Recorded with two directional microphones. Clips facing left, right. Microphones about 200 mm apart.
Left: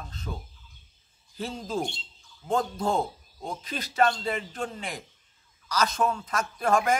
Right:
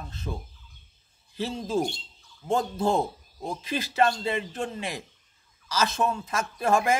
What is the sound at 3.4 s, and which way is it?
Speech, 5° right (ahead or behind).